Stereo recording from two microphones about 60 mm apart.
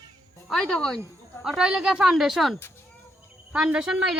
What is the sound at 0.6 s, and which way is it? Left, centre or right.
Speech, centre.